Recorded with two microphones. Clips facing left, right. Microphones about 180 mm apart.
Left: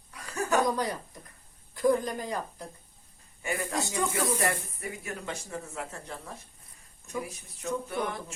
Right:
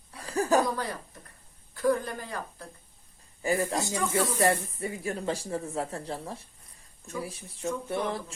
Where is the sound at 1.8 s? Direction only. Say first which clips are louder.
Left 1 dB; 15° left (ahead or behind).